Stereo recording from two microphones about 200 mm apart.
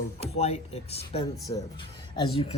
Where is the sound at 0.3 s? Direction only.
30° left (ahead or behind).